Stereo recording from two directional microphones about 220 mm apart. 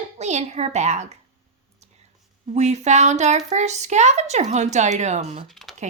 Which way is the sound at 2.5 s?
30° right (ahead or behind).